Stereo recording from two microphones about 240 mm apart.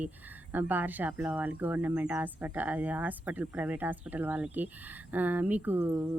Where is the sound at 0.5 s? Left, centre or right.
Centre.